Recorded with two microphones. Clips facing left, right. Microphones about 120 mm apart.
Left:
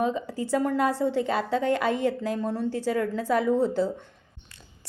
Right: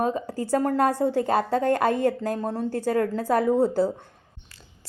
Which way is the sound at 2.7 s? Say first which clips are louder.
Right 2 dB; 45° right (ahead or behind).